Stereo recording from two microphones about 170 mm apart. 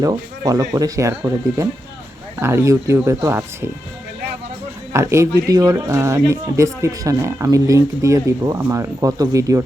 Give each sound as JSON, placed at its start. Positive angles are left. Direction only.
{"t": 0.0, "sound": "speech", "side_deg": -20}
{"t": 4.9, "sound": "speech", "side_deg": -15}